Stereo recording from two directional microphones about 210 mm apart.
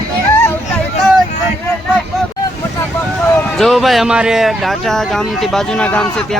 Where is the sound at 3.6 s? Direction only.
Centre (ahead or behind).